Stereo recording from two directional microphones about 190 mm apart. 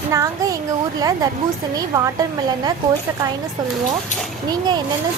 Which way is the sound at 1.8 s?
20° right (ahead or behind).